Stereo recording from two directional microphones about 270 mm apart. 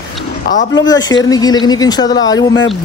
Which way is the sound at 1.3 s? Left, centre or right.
Centre.